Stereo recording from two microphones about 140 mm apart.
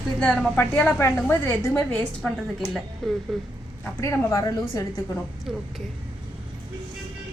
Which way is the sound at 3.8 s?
20° left (ahead or behind).